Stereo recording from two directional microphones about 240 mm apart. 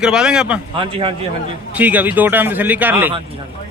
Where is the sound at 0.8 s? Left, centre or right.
Right.